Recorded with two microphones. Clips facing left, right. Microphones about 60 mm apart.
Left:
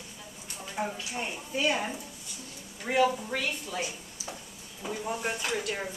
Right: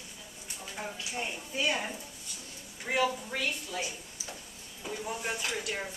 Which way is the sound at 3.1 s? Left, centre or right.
Centre.